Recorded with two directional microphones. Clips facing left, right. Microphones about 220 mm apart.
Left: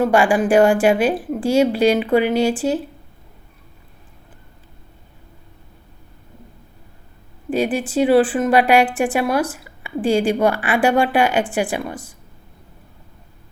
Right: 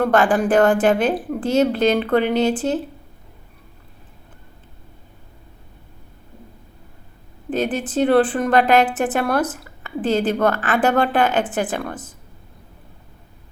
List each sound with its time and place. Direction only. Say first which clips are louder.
0.0 s a woman's voice: left 1 dB; 10° left (ahead or behind)
7.5 s a woman's voice: left 2 dB; 10° left (ahead or behind)